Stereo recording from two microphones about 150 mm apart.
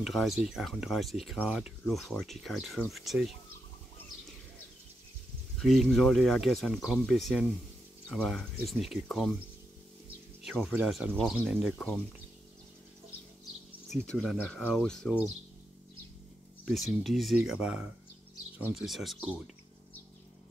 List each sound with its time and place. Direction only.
0.0 s speech: centre (ahead or behind)
5.6 s speech: centre (ahead or behind)
10.4 s speech: centre (ahead or behind)
14.0 s speech: centre (ahead or behind)
16.6 s speech: centre (ahead or behind)